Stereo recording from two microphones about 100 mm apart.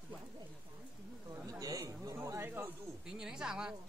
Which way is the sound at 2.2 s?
25° right (ahead or behind).